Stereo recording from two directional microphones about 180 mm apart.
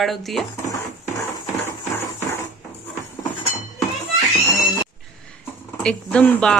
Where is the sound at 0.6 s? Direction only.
20° left (ahead or behind).